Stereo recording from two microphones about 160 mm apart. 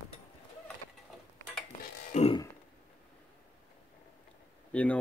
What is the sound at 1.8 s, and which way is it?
Music, 45° left (ahead or behind).